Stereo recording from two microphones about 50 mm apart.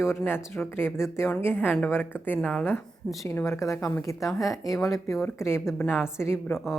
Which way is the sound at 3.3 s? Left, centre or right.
Left.